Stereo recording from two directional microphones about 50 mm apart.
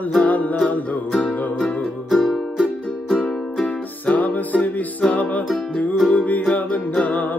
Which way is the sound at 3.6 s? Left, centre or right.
Left.